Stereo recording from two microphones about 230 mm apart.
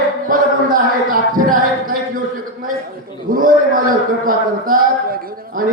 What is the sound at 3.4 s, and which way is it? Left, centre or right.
A man's voice, right.